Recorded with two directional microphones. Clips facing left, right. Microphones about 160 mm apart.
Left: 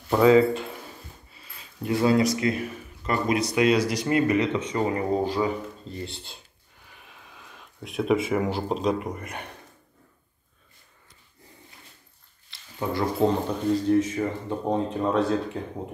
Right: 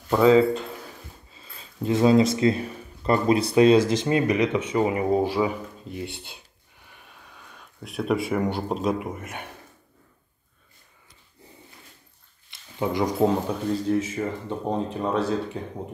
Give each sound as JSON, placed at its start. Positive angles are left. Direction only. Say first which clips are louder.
{"t": 0.1, "sound": "speech", "louder": "even", "side_deg": 5}
{"t": 1.3, "sound": "speech", "louder": "right 2 dB", "side_deg": -25}
{"t": 6.0, "sound": "speech", "louder": "right 3 dB", "side_deg": -60}
{"t": 6.9, "sound": "speech", "louder": "even", "side_deg": 0}
{"t": 12.7, "sound": "speech", "louder": "right 2 dB", "side_deg": -15}
{"t": 13.2, "sound": "speech", "louder": "even", "side_deg": -5}